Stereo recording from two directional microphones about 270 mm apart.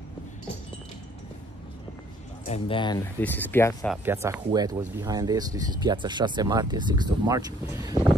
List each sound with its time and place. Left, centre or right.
2.4 s speech: left
3.2 s speech: centre
4.0 s speech: centre